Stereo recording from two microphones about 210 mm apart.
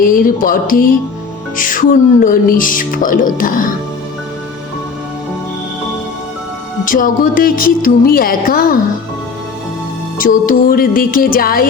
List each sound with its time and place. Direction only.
0.0 s speech: 40° left (ahead or behind)
6.8 s music: 40° left (ahead or behind)
10.2 s music: 40° left (ahead or behind)